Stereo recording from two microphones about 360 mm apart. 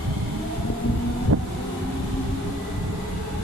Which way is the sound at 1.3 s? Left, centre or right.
Right.